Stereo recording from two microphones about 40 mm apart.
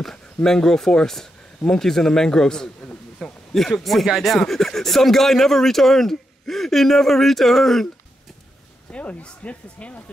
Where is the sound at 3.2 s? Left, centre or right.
Centre.